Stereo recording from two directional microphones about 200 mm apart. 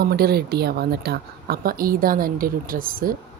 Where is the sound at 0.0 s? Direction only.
50° right (ahead or behind).